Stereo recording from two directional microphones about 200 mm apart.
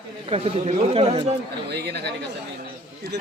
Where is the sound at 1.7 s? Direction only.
55° right (ahead or behind).